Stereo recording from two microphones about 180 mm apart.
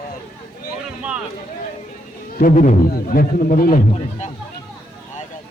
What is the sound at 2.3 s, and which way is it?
Speech, 50° left (ahead or behind).